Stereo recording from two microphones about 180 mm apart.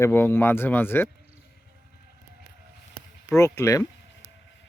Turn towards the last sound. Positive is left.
turn(degrees=15)  # may be behind; listen again after turning